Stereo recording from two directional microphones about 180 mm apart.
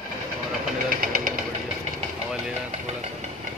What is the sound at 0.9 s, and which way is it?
Vehicle, 50° right (ahead or behind).